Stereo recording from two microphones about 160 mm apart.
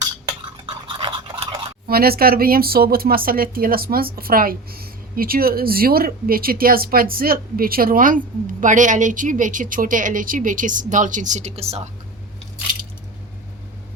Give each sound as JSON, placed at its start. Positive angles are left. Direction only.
{"t": 0.6, "sound": "toothbrush", "side_deg": -35}
{"t": 1.9, "sound": "a woman's voice", "side_deg": -70}